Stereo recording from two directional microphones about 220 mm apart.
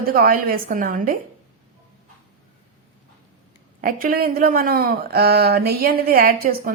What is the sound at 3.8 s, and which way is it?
Speech, 40° right (ahead or behind).